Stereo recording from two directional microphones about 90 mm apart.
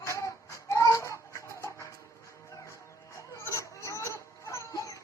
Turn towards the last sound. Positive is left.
turn(degrees=40)  # may be behind; listen again after turning